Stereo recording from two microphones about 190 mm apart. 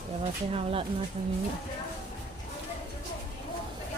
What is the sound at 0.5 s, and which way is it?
Speech, 30° right (ahead or behind).